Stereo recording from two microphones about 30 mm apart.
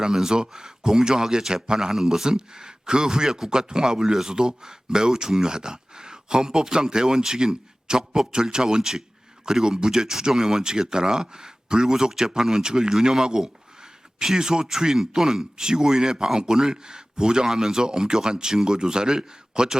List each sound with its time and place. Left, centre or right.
0.1 s speech: centre
1.9 s speech: centre
2.2 s speech: right
3.2 s speech: centre
3.5 s speech: right